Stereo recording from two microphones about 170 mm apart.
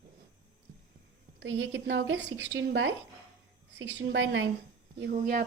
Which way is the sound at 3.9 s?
90° right.